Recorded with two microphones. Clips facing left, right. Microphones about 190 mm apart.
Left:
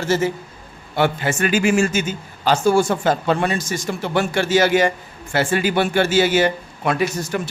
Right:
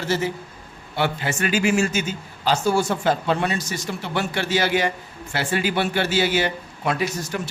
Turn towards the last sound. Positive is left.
turn(degrees=55)  # may be behind; listen again after turning